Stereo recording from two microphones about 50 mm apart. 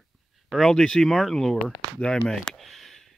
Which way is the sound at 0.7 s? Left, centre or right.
Centre.